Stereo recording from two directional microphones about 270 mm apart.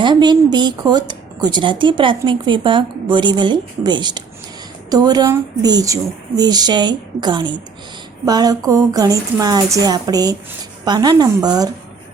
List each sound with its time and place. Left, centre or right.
0.0 s a woman's voice: centre